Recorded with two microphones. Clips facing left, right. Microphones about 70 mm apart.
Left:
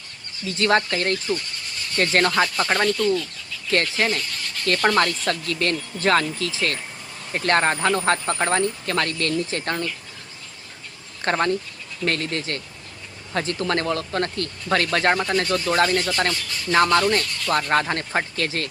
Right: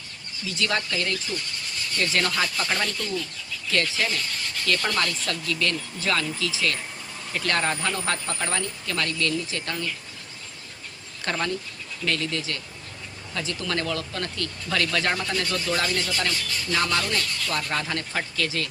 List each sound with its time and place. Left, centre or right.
0.4 s speech: left
11.2 s speech: left